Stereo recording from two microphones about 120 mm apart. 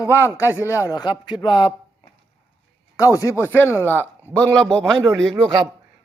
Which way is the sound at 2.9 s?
25° left (ahead or behind).